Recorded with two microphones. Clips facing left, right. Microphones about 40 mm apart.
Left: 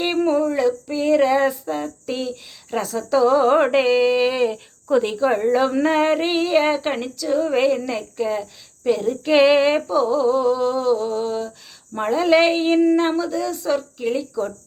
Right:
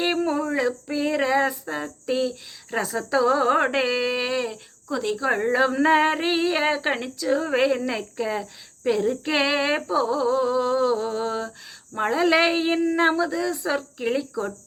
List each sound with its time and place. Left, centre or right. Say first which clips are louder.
0.3 s female singing: left 5 dB; centre
2.8 s speech: left 4 dB; centre
4.9 s speech: left 7 dB; left
5.2 s a woman's voice: left 3 dB; centre
13.0 s speech: left 1 dB; centre